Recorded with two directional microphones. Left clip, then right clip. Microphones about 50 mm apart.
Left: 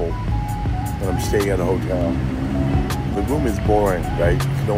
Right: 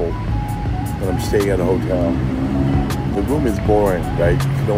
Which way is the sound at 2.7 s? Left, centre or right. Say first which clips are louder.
Right 2 dB; centre.